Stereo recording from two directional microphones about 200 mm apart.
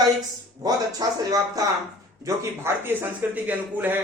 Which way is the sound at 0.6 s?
20° right (ahead or behind).